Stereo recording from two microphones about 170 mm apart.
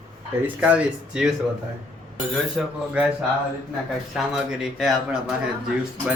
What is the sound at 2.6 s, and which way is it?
Speech, centre (ahead or behind).